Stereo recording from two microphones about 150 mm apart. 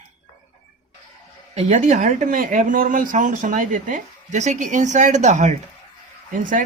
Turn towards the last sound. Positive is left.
turn(degrees=-60)  # may be behind; listen again after turning